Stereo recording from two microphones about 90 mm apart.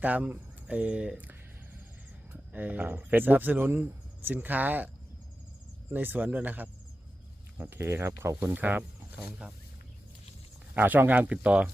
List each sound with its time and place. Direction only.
0.0 s speech: 20° right (ahead or behind)
5.9 s speech: 20° right (ahead or behind)
8.5 s speech: 15° right (ahead or behind)
10.8 s speech: 20° right (ahead or behind)